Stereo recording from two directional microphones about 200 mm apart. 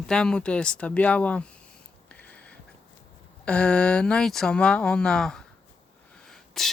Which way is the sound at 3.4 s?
5° left (ahead or behind).